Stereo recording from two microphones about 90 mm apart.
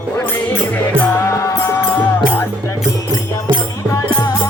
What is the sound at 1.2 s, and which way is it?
Music, 35° left (ahead or behind).